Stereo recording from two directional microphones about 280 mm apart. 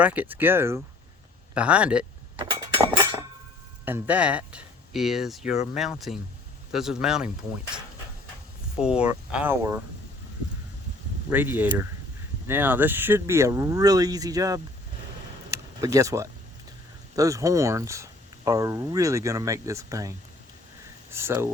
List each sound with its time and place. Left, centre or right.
0.0 s speech: centre
2.4 s chink: centre
3.8 s speech: centre
11.3 s speech: centre
15.4 s a sound: centre
17.2 s speech: centre